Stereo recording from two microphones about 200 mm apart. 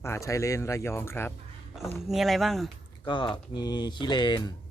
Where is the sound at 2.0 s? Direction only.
Centre (ahead or behind).